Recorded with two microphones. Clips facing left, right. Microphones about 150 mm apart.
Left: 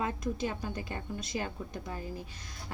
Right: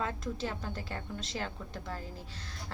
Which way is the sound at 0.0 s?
15° left (ahead or behind).